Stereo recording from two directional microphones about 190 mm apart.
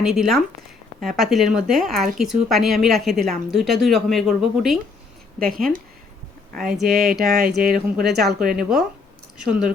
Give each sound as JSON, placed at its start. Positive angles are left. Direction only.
{"t": 0.0, "sound": "speech", "side_deg": 0}
{"t": 5.5, "sound": "speech", "side_deg": -50}
{"t": 6.7, "sound": "speech", "side_deg": 0}
{"t": 8.4, "sound": "speech", "side_deg": -50}
{"t": 9.4, "sound": "speech", "side_deg": -5}